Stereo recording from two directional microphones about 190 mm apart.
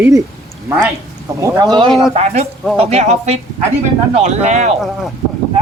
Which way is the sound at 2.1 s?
35° right (ahead or behind).